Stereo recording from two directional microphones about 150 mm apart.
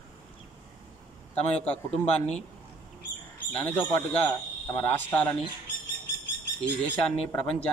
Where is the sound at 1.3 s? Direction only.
10° left (ahead or behind).